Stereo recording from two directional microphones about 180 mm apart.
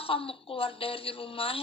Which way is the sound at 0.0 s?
30° left (ahead or behind).